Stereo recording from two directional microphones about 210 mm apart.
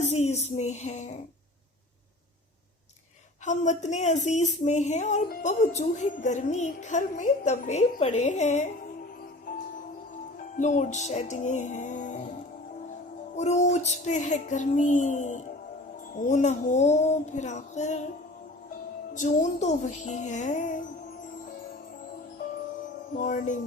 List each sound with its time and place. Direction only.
0.0 s a woman's voice: 30° left (ahead or behind)
3.4 s a woman's voice: 35° left (ahead or behind)
10.6 s a woman's voice: 35° left (ahead or behind)
13.3 s a woman's voice: 35° left (ahead or behind)
19.1 s a woman's voice: 35° left (ahead or behind)
23.1 s a woman's voice: 40° left (ahead or behind)